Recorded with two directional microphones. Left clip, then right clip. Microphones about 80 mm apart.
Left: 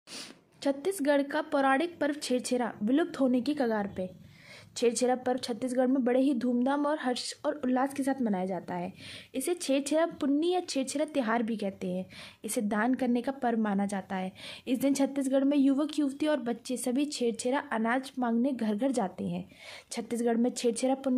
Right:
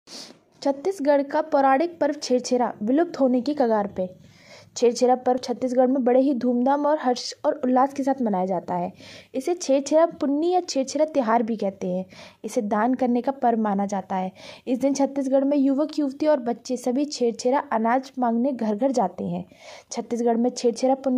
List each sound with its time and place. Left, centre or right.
0.6 s a woman's voice: right
2.7 s a woman's voice: centre
3.3 s a woman's voice: right
14.8 s a woman's voice: centre